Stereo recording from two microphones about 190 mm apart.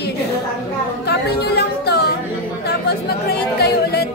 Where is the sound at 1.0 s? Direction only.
60° left (ahead or behind).